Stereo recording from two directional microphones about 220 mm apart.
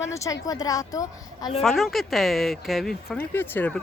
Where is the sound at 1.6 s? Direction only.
Centre (ahead or behind).